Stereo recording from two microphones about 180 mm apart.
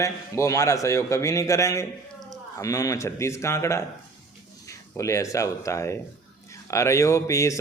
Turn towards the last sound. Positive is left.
turn(degrees=15)  # may be behind; listen again after turning